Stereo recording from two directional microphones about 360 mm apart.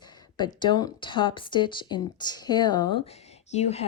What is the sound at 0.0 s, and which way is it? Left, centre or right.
Speech, centre.